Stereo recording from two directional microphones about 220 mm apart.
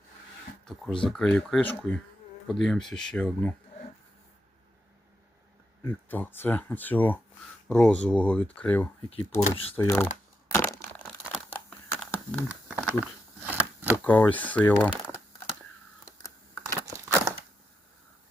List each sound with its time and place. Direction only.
0.6 s speech: 5° left (ahead or behind)
5.8 s speech: 10° left (ahead or behind)
9.0 s speech: 25° left (ahead or behind)
9.7 s speech: 10° left (ahead or behind)
10.5 s crushing: 10° left (ahead or behind)
11.2 s crumpling: 5° left (ahead or behind)
12.5 s a sound: 5° right (ahead or behind)
13.9 s speech: 5° left (ahead or behind)
16.8 s a sound: 15° right (ahead or behind)